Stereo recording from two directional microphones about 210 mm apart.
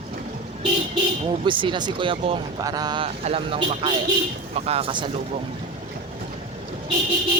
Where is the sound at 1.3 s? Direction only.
25° right (ahead or behind).